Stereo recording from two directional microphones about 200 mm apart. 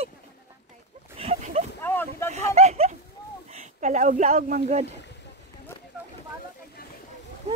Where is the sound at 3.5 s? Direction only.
40° right (ahead or behind).